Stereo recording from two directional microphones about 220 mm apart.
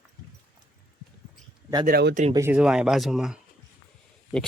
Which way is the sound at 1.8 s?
45° right (ahead or behind).